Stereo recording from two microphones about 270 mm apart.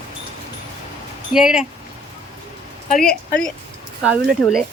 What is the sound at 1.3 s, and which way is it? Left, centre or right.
Speech, centre.